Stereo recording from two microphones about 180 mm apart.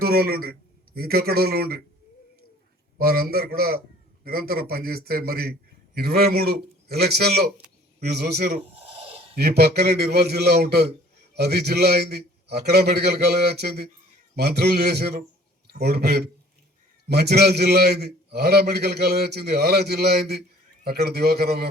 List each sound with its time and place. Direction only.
0.0 s a man's voice: 60° right (ahead or behind)
3.0 s a man's voice: 55° right (ahead or behind)
8.7 s snort: 35° right (ahead or behind)
9.3 s a man's voice: 60° right (ahead or behind)